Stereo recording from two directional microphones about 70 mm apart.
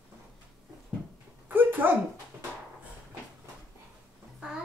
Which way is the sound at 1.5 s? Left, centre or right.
Right.